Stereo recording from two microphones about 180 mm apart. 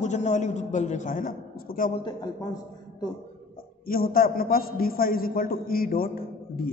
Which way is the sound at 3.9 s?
55° left (ahead or behind).